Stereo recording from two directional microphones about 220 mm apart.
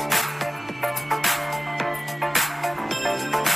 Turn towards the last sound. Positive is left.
turn(degrees=0)  # may be behind; listen again after turning